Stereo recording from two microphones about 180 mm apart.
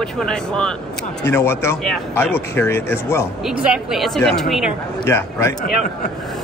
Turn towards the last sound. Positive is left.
turn(degrees=15)  # may be behind; listen again after turning